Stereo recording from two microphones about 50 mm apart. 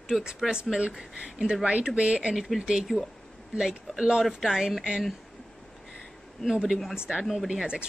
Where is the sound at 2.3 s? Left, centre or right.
Centre.